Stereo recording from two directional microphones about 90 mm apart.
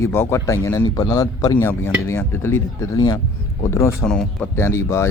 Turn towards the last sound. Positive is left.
turn(degrees=30)  # may be behind; listen again after turning